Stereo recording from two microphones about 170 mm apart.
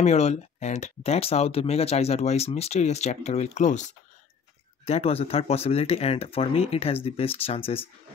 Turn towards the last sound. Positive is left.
turn(degrees=35)  # may be behind; listen again after turning